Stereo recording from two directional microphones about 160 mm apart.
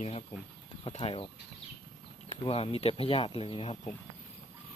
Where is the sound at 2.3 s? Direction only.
35° left (ahead or behind).